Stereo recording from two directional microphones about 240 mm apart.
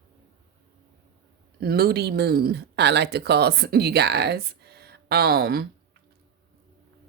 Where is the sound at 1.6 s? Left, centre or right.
Right.